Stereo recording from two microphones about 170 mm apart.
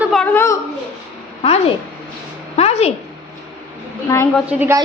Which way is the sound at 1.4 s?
35° left (ahead or behind).